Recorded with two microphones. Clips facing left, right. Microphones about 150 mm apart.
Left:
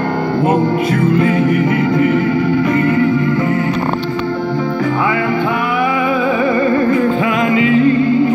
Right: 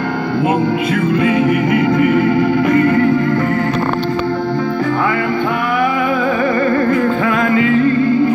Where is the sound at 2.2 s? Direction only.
35° right (ahead or behind).